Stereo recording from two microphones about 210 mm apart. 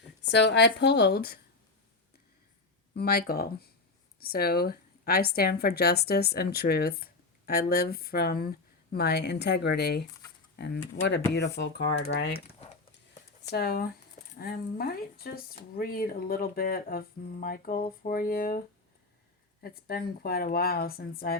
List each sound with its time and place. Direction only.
0.3 s a woman's voice: 55° left (ahead or behind)
2.9 s a woman's voice: 50° left (ahead or behind)
13.5 s a woman's voice: 50° left (ahead or behind)
19.6 s a woman's voice: 45° left (ahead or behind)